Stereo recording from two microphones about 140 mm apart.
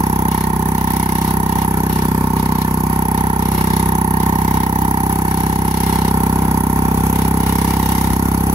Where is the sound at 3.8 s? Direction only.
50° right (ahead or behind).